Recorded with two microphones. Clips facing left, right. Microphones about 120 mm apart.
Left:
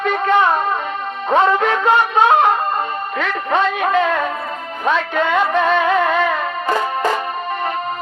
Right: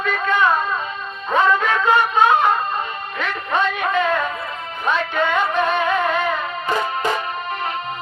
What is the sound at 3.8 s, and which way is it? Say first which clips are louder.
Music: left 3 dB; 65° left (ahead or behind).